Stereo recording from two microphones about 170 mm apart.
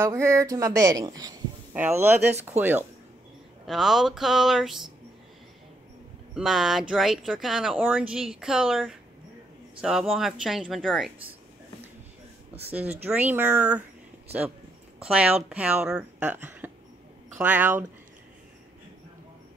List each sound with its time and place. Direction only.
0.0 s speech: 15° right (ahead or behind)
1.7 s speech: 10° right (ahead or behind)
3.6 s speech: centre (ahead or behind)
6.3 s speech: centre (ahead or behind)
13.0 s speech: 10° right (ahead or behind)
15.0 s speech: 5° right (ahead or behind)